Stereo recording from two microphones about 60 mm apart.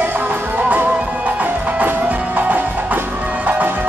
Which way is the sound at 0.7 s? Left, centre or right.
Right.